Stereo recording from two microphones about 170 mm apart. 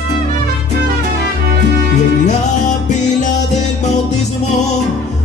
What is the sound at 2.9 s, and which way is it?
Music, 45° left (ahead or behind).